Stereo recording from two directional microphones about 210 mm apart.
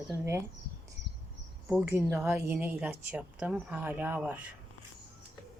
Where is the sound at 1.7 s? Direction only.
10° right (ahead or behind).